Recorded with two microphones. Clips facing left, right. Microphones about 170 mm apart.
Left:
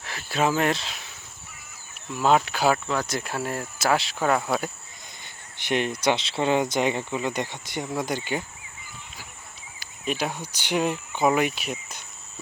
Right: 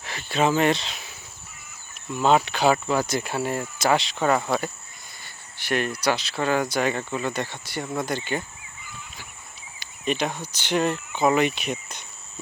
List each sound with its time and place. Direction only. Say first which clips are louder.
0.0 s speech: right 2 dB; centre (ahead or behind)
2.1 s speech: right 1 dB; centre (ahead or behind)
5.2 s speech: even; 20° left (ahead or behind)
9.8 s speech: right 2 dB; 5° left (ahead or behind)